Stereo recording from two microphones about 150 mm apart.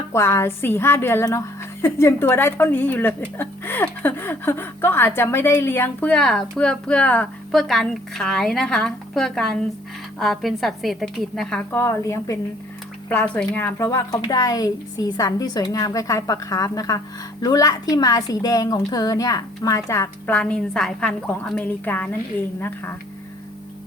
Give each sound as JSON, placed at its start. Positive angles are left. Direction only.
{"t": 0.1, "sound": "a woman's voice", "side_deg": 20}
{"t": 11.8, "sound": "a woman's voice", "side_deg": 20}